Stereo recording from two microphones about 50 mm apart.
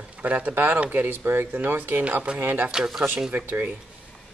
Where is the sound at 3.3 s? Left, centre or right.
Right.